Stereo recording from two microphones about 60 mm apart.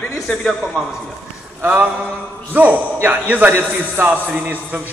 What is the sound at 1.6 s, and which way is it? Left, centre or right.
A man's voice, right.